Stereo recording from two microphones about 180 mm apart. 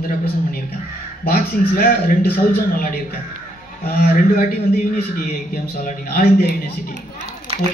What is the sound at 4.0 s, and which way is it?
Speech, 50° left (ahead or behind).